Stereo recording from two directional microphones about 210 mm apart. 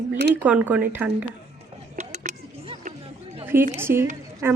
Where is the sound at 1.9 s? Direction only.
35° right (ahead or behind).